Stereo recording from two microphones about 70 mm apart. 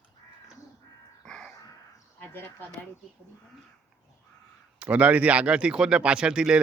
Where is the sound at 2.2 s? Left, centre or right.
Left.